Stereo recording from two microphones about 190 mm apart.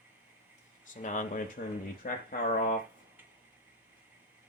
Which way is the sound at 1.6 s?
55° left (ahead or behind).